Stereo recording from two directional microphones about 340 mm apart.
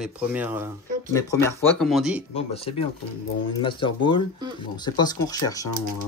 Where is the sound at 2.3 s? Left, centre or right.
Centre.